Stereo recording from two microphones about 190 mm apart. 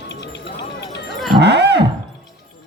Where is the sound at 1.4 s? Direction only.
60° right (ahead or behind).